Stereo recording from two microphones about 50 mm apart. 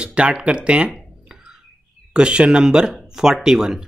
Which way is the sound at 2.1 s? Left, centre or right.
Centre.